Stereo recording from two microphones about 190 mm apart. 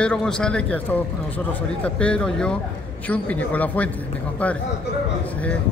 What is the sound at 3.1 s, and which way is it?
Speech, 10° left (ahead or behind).